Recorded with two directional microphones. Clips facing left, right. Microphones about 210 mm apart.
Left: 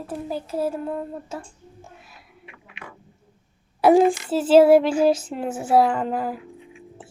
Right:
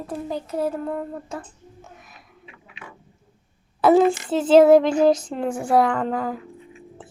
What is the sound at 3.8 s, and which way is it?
Child singing, 10° left (ahead or behind).